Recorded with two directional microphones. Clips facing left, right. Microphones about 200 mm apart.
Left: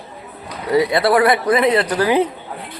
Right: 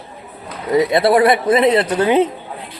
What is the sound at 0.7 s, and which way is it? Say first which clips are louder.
Speech: right 2 dB; 20° right (ahead or behind).